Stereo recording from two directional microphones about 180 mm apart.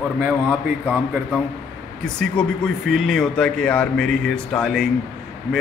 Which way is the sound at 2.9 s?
Centre (ahead or behind).